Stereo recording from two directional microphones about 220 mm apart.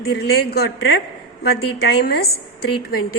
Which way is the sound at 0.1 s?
45° left (ahead or behind).